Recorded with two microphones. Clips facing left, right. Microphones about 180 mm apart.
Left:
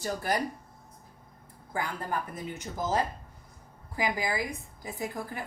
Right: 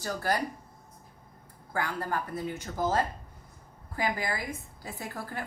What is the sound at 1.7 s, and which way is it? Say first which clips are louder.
Speech: right 1 dB; 15° left (ahead or behind).